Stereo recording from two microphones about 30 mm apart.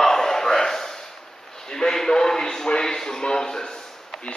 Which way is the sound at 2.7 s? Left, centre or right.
Left.